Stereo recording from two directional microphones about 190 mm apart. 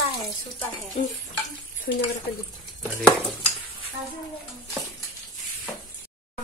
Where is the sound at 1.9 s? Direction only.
60° left (ahead or behind).